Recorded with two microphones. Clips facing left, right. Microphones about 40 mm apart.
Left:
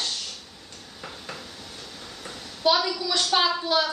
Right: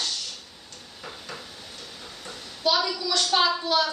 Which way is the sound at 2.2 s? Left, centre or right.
Centre.